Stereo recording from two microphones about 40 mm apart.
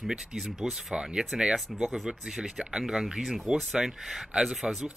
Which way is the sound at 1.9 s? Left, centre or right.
Centre.